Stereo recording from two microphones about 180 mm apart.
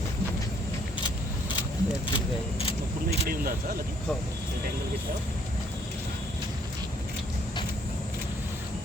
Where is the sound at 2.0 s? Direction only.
30° left (ahead or behind).